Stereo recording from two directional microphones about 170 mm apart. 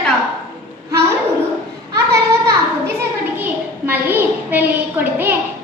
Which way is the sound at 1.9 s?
15° right (ahead or behind).